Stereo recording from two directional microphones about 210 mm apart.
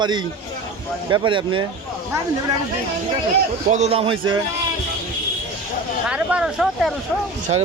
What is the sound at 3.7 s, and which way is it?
Speech, 30° right (ahead or behind).